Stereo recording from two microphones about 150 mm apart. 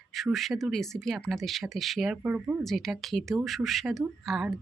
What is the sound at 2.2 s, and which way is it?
Speech, 10° right (ahead or behind).